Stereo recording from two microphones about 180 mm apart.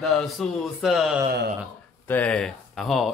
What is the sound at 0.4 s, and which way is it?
Speech, centre (ahead or behind).